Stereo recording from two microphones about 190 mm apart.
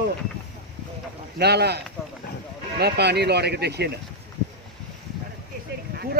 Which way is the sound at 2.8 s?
60° right (ahead or behind).